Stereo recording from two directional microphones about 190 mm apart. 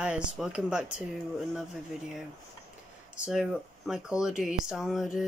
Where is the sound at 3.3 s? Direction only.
Centre (ahead or behind).